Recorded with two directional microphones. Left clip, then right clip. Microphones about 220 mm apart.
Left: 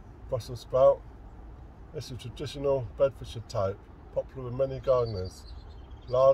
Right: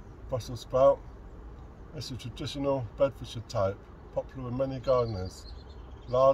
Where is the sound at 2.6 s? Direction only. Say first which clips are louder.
Left 2 dB; 20° left (ahead or behind).